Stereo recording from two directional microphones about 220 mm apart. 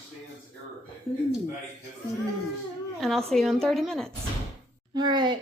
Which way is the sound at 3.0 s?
Centre (ahead or behind).